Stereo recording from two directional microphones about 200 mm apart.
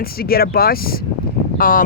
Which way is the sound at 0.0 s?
50° left (ahead or behind).